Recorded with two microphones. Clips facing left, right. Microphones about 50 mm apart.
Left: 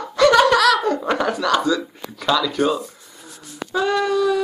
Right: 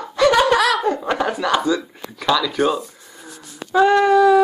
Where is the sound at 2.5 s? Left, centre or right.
Centre.